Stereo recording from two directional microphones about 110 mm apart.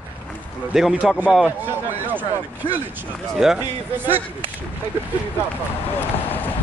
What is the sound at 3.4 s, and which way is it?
Speech, 5° right (ahead or behind).